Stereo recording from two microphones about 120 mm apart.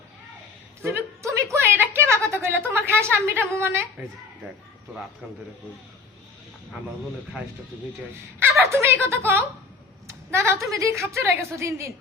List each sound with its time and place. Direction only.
0.8 s a woman's voice: 20° right (ahead or behind)
8.4 s a woman's voice: 15° right (ahead or behind)